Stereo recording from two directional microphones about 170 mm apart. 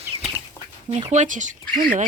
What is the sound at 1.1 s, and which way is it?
Speech, 45° right (ahead or behind).